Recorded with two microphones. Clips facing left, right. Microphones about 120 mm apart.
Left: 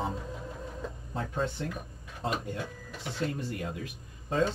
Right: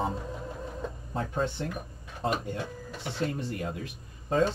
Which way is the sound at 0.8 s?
40° right (ahead or behind).